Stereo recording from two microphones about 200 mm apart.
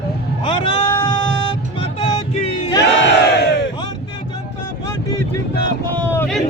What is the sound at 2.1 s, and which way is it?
Music, 30° left (ahead or behind).